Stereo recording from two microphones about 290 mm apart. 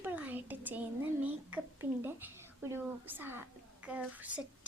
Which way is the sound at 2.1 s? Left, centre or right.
Centre.